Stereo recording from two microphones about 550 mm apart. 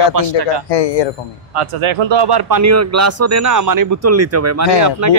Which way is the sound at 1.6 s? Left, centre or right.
Right.